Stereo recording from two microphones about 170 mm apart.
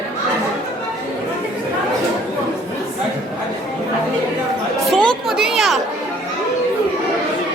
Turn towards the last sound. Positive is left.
turn(degrees=0)  # may be behind; listen again after turning